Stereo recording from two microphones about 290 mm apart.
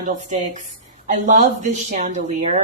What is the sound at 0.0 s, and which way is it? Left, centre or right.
A woman's voice, right.